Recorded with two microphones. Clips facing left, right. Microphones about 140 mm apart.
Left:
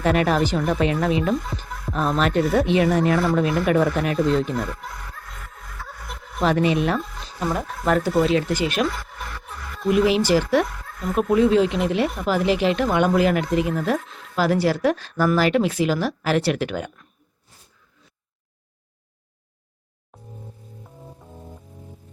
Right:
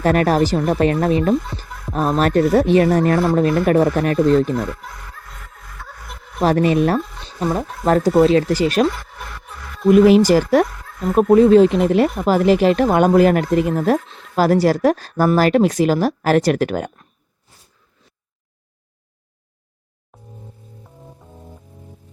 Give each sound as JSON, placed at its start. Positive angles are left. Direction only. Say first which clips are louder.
{"t": 0.0, "sound": "speech", "louder": "right 4 dB", "side_deg": -40}
{"t": 4.5, "sound": "speech", "louder": "right 4 dB", "side_deg": 0}
{"t": 5.7, "sound": "music", "louder": "even", "side_deg": 0}
{"t": 6.4, "sound": "speech", "louder": "right 4 dB", "side_deg": -45}
{"t": 7.3, "sound": "speech", "louder": "right 4 dB", "side_deg": -30}
{"t": 9.5, "sound": "music", "louder": "right 8 dB", "side_deg": 0}
{"t": 9.9, "sound": "speech", "louder": "right 7 dB", "side_deg": -45}
{"t": 20.8, "sound": "music", "louder": "even", "side_deg": 0}